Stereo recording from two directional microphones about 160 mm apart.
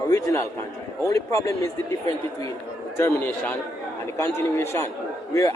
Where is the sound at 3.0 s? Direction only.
15° left (ahead or behind).